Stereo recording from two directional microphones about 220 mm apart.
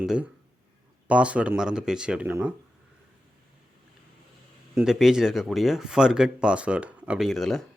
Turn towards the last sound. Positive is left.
turn(degrees=0)  # may be behind; listen again after turning